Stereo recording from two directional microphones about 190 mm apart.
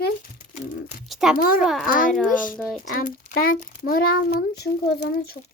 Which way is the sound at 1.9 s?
45° left (ahead or behind).